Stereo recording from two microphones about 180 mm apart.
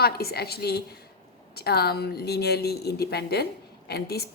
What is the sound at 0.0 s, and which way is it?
A woman's voice, 60° left (ahead or behind).